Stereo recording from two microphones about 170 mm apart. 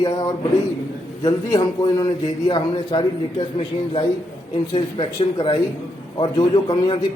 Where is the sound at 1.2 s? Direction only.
25° left (ahead or behind).